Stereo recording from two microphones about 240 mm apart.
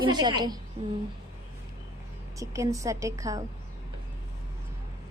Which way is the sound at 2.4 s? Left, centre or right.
Centre.